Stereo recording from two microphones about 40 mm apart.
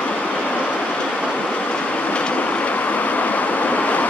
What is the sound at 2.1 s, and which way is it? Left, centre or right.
Vehicle, left.